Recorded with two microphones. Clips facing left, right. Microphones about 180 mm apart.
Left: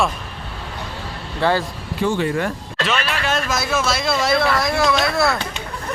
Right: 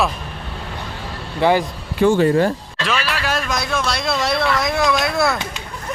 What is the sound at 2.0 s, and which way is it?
Speech, 45° right (ahead or behind).